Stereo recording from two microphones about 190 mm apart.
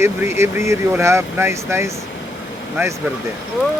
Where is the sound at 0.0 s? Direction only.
15° right (ahead or behind).